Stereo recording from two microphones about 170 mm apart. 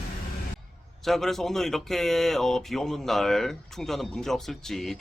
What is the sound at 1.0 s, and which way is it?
Speech, centre (ahead or behind).